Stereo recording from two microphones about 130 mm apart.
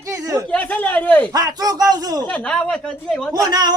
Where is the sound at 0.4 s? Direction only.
10° left (ahead or behind).